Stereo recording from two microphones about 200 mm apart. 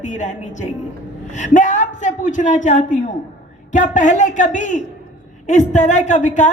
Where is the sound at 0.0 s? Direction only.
35° left (ahead or behind).